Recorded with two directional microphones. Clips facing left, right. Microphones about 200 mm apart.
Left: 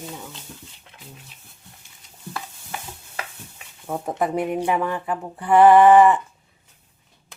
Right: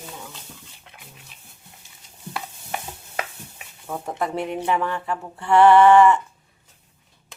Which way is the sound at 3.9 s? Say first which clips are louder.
Left 3 dB; 20° left (ahead or behind).